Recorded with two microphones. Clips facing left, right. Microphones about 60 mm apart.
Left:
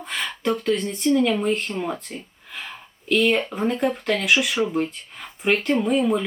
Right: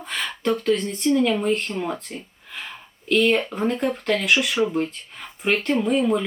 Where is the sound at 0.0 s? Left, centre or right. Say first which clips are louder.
Even; centre.